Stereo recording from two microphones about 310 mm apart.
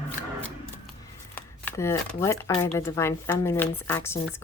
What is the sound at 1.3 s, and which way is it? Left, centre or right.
Speech, centre.